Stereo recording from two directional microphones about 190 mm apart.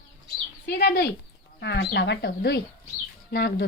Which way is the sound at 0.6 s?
60° left (ahead or behind).